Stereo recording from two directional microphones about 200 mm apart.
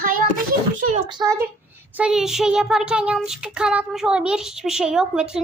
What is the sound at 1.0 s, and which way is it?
Speech, 20° right (ahead or behind).